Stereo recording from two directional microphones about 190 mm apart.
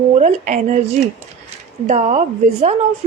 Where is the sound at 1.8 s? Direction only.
35° right (ahead or behind).